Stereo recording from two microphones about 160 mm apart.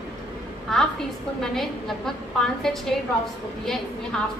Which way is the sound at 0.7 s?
Centre (ahead or behind).